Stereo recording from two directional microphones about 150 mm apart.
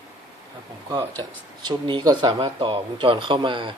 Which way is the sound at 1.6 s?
30° right (ahead or behind).